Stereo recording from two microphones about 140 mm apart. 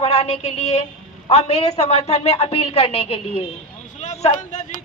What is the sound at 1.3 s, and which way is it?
A woman's voice, 50° left (ahead or behind).